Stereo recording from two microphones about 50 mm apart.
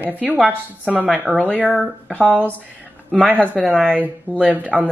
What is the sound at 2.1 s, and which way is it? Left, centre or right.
Speech, right.